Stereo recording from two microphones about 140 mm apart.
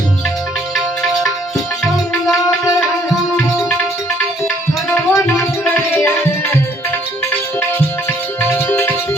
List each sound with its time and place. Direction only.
4.9 s music: 15° left (ahead or behind)
8.4 s music: 20° left (ahead or behind)